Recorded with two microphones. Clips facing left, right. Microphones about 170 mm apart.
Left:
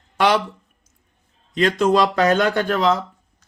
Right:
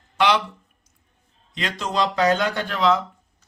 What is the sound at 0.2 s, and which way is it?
Speech, 45° left (ahead or behind).